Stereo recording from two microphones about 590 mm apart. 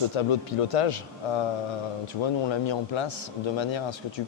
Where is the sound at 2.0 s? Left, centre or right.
Left.